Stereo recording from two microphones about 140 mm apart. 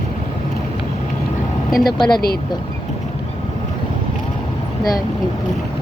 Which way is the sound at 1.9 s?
30° left (ahead or behind).